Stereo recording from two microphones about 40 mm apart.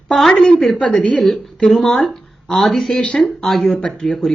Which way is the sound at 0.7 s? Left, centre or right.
Left.